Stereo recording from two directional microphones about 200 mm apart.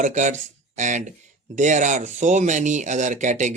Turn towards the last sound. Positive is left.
turn(degrees=-35)  # may be behind; listen again after turning